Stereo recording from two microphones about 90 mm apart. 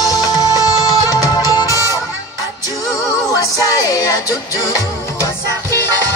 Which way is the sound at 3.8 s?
40° left (ahead or behind).